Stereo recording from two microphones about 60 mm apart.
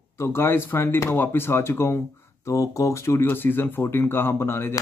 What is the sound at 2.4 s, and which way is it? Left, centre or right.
Speech, left.